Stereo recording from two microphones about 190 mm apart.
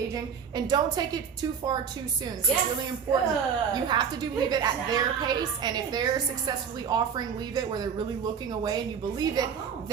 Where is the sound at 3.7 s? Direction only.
25° right (ahead or behind).